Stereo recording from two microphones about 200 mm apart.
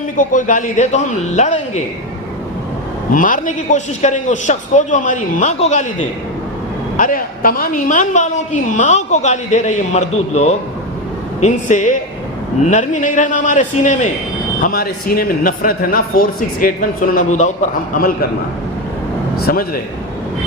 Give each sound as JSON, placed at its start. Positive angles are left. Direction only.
{"t": 0.2, "sound": "a man's voice", "side_deg": 40}
{"t": 3.1, "sound": "a man's voice", "side_deg": 40}
{"t": 19.4, "sound": "speech", "side_deg": 45}